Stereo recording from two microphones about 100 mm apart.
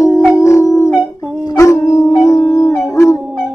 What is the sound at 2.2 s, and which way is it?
Howl, 30° left (ahead or behind).